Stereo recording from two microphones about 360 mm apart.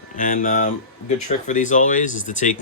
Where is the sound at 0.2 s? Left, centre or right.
Left.